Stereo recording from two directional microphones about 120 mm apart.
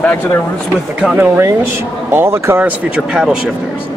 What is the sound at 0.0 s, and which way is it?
Speech, 10° left (ahead or behind).